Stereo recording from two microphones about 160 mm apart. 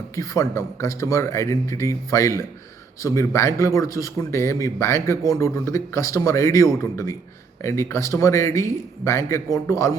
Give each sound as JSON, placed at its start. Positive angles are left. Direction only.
{"t": 0.2, "sound": "a man's voice", "side_deg": 20}